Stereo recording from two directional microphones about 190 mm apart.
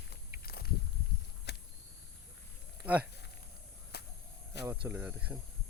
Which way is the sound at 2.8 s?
10° right (ahead or behind).